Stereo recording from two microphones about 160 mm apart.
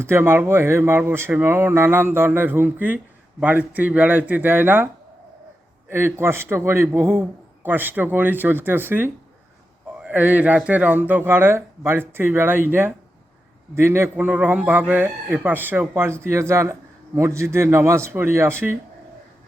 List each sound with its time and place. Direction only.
0.0 s a man's voice: 15° right (ahead or behind)
5.9 s a man's voice: 15° right (ahead or behind)